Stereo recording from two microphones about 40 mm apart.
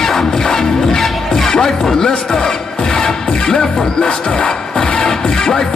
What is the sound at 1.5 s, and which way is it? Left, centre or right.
Speech, centre.